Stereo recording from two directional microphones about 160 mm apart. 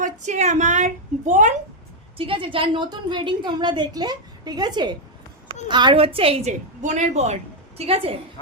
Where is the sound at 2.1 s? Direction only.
35° right (ahead or behind).